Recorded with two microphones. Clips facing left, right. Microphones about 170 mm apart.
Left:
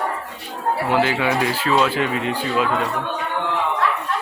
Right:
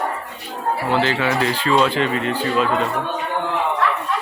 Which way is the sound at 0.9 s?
10° left (ahead or behind).